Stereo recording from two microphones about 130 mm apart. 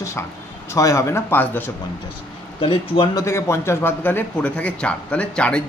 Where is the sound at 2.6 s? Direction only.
40° left (ahead or behind).